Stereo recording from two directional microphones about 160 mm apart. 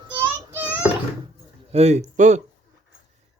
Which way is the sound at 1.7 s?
45° right (ahead or behind).